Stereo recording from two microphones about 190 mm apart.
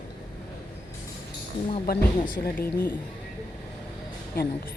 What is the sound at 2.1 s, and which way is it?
Speech, 25° left (ahead or behind).